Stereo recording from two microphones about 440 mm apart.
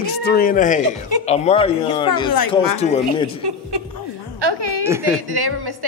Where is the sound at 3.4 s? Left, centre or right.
Right.